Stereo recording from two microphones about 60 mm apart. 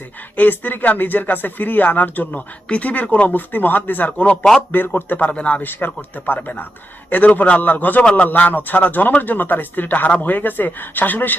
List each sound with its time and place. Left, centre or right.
0.3 s speech: left
5.6 s speech: left